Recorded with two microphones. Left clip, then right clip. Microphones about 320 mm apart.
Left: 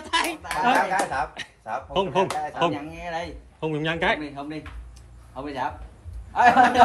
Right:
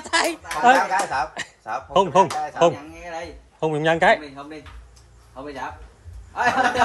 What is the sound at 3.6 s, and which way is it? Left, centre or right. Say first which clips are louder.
Speech: right 7 dB; right.